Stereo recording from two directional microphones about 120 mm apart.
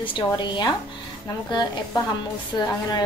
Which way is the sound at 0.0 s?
40° left (ahead or behind).